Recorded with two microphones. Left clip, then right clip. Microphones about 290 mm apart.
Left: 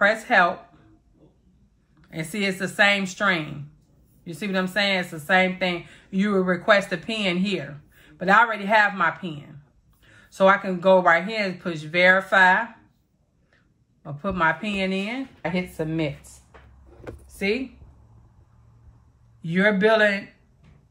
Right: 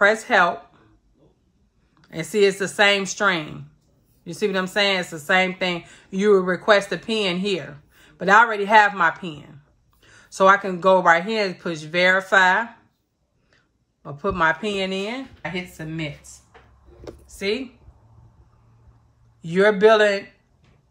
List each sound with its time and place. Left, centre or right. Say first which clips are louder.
0.0 s speech: right 2 dB; centre
2.0 s speech: right 9 dB; right
14.0 s speech: right 2 dB; right
15.4 s speech: left 5 dB; centre
17.4 s speech: even; centre
19.4 s speech: right 4 dB; centre